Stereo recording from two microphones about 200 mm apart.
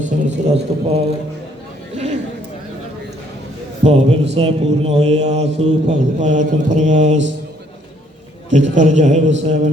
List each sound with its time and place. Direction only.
0.0 s speech: 35° right (ahead or behind)
3.8 s speech: 35° right (ahead or behind)
8.4 s speech: 35° right (ahead or behind)